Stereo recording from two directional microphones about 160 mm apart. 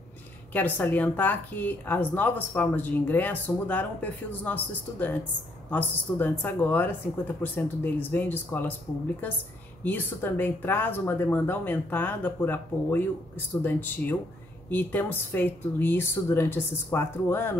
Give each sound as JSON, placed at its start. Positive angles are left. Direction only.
{"t": 0.5, "sound": "speech", "side_deg": 10}
{"t": 9.8, "sound": "speech", "side_deg": 10}